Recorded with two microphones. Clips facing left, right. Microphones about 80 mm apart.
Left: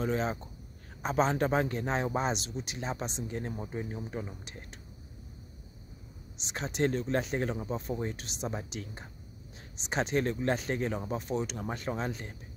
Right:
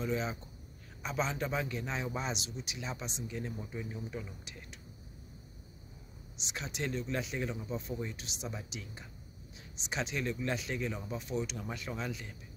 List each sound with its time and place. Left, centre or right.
0.0 s speech: left
6.3 s speech: left